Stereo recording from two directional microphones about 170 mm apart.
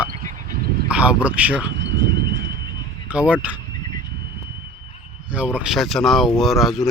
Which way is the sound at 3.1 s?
10° right (ahead or behind).